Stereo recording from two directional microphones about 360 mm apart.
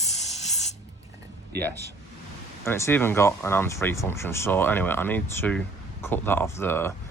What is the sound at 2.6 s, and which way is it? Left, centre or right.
Speech, centre.